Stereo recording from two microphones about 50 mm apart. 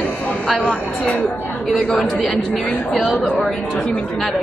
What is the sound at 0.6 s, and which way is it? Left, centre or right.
Speech, left.